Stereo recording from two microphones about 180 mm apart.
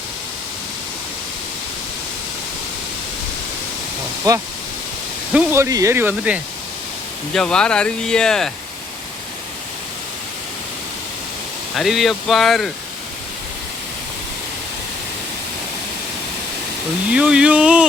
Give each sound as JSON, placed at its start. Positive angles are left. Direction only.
{"t": 4.3, "sound": "speech", "side_deg": -20}
{"t": 7.3, "sound": "speech", "side_deg": 5}
{"t": 11.8, "sound": "speech", "side_deg": 0}
{"t": 17.1, "sound": "speech", "side_deg": -5}